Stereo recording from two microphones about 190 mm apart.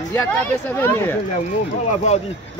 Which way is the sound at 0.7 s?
10° left (ahead or behind).